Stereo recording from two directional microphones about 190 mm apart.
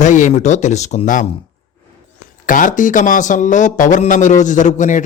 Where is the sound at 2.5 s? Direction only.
45° left (ahead or behind).